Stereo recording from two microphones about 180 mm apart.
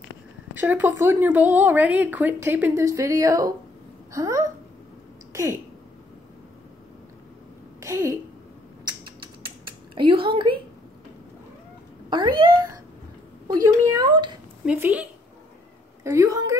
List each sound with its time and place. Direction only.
0.6 s a woman's voice: 10° right (ahead or behind)
7.8 s a woman's voice: 15° right (ahead or behind)
8.8 s rodents: 25° right (ahead or behind)
9.9 s a woman's voice: 30° right (ahead or behind)
12.1 s a child's voice: 25° right (ahead or behind)
14.7 s a woman's voice: 10° right (ahead or behind)